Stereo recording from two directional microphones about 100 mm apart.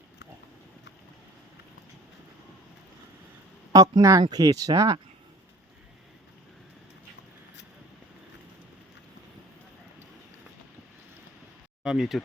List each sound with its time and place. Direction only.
3.7 s speech: 40° right (ahead or behind)
11.8 s speech: 5° right (ahead or behind)